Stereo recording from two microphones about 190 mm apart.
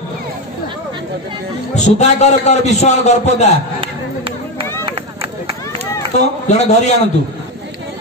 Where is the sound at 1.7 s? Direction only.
35° left (ahead or behind).